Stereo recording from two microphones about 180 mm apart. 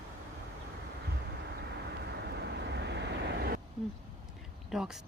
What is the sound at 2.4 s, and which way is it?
Vehicle, 70° right (ahead or behind).